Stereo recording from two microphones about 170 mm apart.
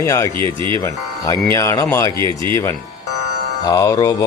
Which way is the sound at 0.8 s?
15° left (ahead or behind).